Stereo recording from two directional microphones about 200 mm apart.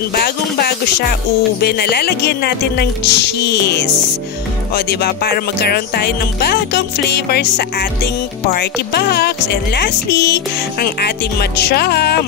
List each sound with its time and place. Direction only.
0.1 s speech: 50° left (ahead or behind)